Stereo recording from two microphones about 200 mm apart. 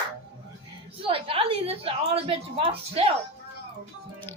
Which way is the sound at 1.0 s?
25° right (ahead or behind).